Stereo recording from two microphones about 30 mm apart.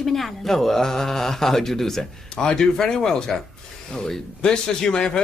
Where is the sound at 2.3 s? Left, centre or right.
Left.